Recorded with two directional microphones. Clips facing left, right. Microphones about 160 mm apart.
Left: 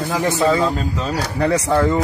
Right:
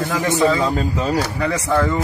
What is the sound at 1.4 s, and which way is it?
Speech, 40° left (ahead or behind).